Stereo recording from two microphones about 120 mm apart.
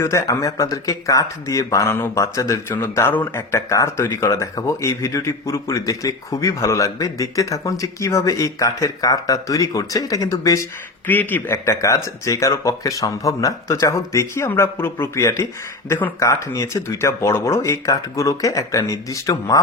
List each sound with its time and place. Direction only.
0.0 s speech: 25° left (ahead or behind)
11.0 s speech: 15° left (ahead or behind)
16.2 s speech: 25° left (ahead or behind)